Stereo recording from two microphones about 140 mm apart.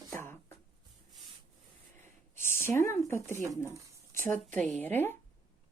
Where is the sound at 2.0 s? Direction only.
15° left (ahead or behind).